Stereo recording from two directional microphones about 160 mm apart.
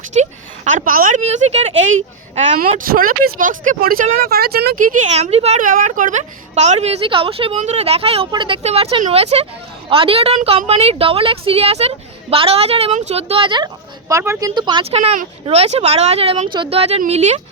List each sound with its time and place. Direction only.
0.1 s speech: 45° right (ahead or behind)
1.2 s speech: 45° right (ahead or behind)
2.7 s speech: 65° right (ahead or behind); by 5.6 s 40° right (ahead or behind)
5.6 s a woman's voice: 55° right (ahead or behind); by 13.7 s 30° right (ahead or behind)
14.1 s a woman's voice: 20° right (ahead or behind); by 17.4 s 45° right (ahead or behind)